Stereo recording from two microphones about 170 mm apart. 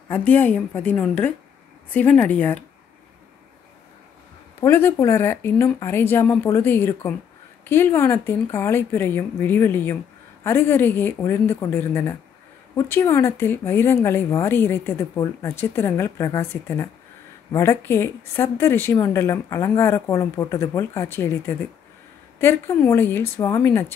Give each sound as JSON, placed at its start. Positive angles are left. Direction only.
{"t": 0.1, "sound": "speech", "side_deg": 10}
{"t": 4.6, "sound": "speech", "side_deg": 15}